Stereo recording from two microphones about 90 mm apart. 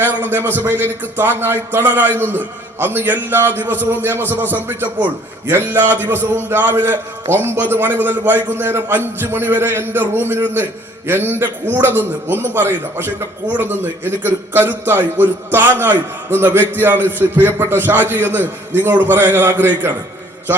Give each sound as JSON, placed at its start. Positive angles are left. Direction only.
{"t": 0.0, "sound": "a man's voice", "side_deg": -20}